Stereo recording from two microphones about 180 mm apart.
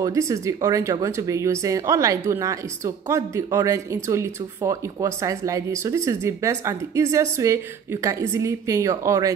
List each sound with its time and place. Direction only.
0.0 s speech: 20° right (ahead or behind)